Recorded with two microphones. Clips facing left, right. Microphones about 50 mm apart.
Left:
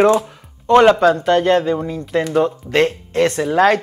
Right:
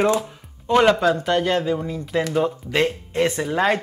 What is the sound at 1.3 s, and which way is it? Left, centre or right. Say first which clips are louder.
Speech: left 6 dB; left.